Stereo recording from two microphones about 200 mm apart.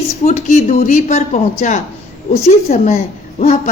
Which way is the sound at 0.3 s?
35° left (ahead or behind).